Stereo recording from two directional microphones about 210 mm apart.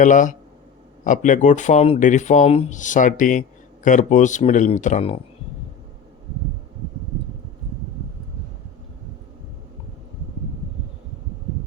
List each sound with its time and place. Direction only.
0.0 s speech: 40° left (ahead or behind)